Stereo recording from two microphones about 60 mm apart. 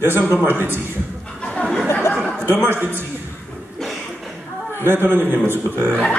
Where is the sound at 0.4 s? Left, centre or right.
Right.